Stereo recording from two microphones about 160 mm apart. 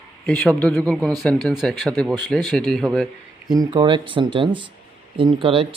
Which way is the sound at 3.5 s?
25° right (ahead or behind).